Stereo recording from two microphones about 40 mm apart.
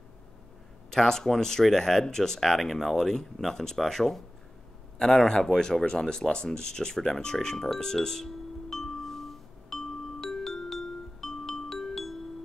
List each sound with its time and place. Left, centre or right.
0.9 s speech: centre
7.1 s music: centre